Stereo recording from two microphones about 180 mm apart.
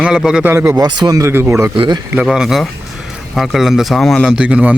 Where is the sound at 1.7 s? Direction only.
30° right (ahead or behind).